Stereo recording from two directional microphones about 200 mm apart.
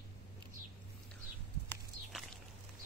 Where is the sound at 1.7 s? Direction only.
Centre (ahead or behind).